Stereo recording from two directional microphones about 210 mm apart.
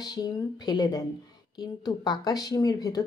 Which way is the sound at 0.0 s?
20° left (ahead or behind).